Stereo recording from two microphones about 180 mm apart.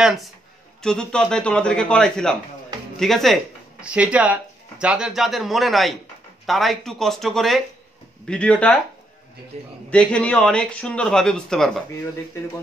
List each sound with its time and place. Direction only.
0.0 s speech: centre (ahead or behind)
9.5 s a man's voice: 35° right (ahead or behind)
9.8 s speech: 5° left (ahead or behind)